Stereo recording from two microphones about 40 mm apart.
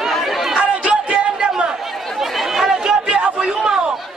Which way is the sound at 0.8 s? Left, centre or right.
Right.